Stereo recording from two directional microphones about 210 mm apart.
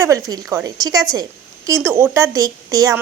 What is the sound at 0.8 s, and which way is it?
A woman's voice, 20° right (ahead or behind).